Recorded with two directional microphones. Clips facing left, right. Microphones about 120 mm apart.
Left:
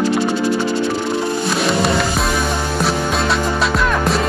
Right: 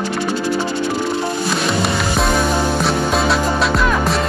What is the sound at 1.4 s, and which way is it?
Music, centre (ahead or behind).